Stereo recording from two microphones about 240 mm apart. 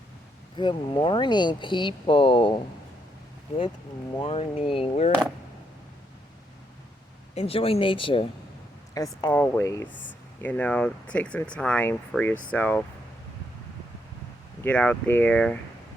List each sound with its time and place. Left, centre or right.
0.5 s speech: centre
4.2 s speech: left
7.3 s speech: left
9.2 s speech: centre
14.6 s speech: centre